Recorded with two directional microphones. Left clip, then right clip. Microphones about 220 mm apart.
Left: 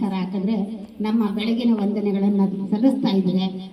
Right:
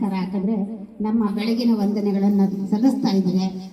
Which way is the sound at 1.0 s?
20° left (ahead or behind).